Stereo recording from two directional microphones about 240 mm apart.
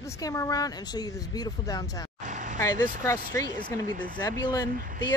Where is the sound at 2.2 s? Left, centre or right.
Right.